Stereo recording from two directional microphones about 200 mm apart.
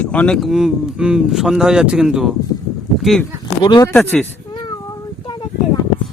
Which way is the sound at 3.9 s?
5° left (ahead or behind).